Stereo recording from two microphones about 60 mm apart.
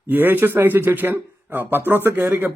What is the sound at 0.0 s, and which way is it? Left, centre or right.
Speech, right.